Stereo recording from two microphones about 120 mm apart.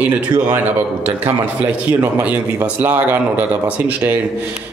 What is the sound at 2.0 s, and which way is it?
Speech, 15° right (ahead or behind).